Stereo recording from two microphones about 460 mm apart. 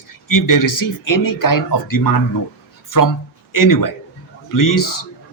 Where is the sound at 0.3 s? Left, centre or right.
Left.